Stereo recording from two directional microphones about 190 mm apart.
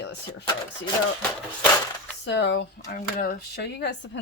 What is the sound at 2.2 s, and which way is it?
Speech, 65° left (ahead or behind).